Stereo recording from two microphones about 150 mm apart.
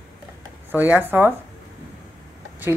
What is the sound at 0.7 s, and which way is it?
Speech, 15° right (ahead or behind).